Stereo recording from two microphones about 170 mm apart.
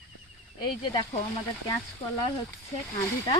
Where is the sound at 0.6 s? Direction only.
25° left (ahead or behind).